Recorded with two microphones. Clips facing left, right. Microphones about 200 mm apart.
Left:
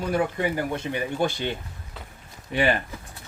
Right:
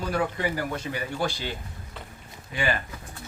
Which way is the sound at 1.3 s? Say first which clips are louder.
Left 5 dB; 55° left (ahead or behind).